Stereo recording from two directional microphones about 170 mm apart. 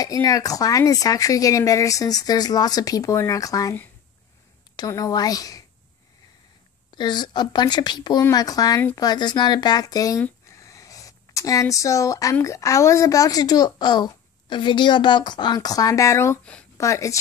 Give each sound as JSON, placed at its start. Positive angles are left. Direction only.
{"t": 0.0, "sound": "speech", "side_deg": 20}
{"t": 4.7, "sound": "speech", "side_deg": 20}
{"t": 6.9, "sound": "speech", "side_deg": 25}